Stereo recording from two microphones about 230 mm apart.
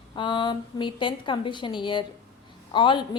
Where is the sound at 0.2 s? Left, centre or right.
Centre.